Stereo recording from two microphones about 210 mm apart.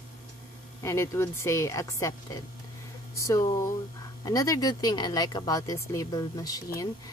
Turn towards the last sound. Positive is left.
turn(degrees=15)  # may be behind; listen again after turning